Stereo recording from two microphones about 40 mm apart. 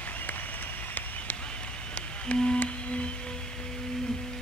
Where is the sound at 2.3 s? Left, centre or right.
Left.